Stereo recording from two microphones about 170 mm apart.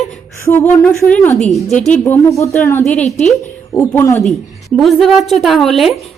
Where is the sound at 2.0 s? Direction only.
15° left (ahead or behind).